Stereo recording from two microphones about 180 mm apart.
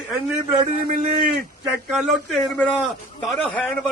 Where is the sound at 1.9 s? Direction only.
Centre (ahead or behind).